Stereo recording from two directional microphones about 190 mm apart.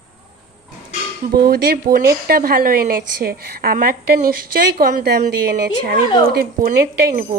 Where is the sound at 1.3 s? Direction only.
55° right (ahead or behind).